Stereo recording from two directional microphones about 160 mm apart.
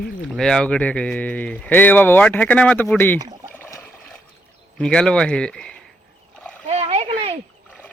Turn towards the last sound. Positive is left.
turn(degrees=-40)  # may be behind; listen again after turning